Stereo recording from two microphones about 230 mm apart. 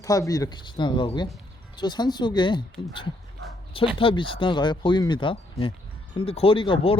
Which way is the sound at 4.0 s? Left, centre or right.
Left.